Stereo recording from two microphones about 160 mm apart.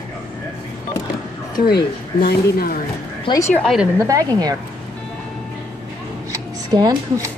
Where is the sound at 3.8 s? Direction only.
20° right (ahead or behind).